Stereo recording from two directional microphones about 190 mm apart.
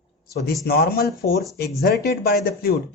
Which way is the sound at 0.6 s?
55° left (ahead or behind).